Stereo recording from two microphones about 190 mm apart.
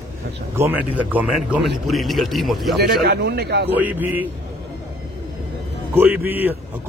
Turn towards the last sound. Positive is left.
turn(degrees=-10)  # may be behind; listen again after turning